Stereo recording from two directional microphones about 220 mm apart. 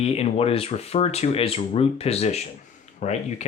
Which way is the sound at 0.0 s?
25° left (ahead or behind).